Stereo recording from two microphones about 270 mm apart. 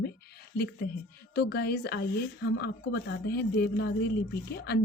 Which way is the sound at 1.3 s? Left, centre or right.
Left.